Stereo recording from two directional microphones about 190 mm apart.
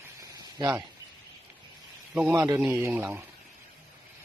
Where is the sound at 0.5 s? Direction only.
20° right (ahead or behind).